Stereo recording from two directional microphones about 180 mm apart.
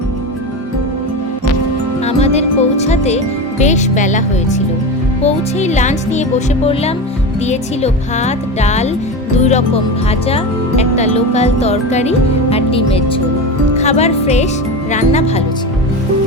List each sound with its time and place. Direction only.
2.0 s music: 35° left (ahead or behind)
3.6 s speech: 40° left (ahead or behind)
7.4 s speech: 40° left (ahead or behind)